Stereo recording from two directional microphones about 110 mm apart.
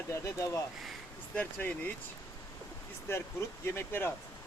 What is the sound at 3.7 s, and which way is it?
Speech, 20° left (ahead or behind).